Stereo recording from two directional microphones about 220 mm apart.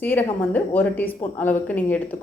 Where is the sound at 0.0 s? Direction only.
10° left (ahead or behind).